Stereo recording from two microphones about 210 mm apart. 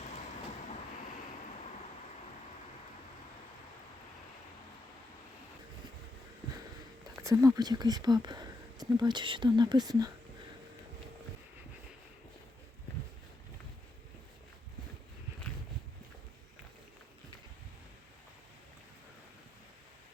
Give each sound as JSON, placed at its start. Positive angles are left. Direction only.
{"t": 7.2, "sound": "speech", "side_deg": -15}